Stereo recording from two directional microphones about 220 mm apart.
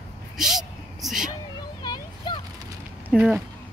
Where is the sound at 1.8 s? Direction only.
20° left (ahead or behind).